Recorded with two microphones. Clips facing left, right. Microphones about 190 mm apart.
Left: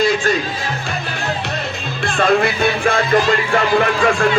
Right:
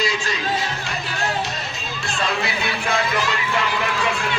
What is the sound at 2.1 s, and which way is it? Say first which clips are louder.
Speech: left 10 dB; 55° left (ahead or behind).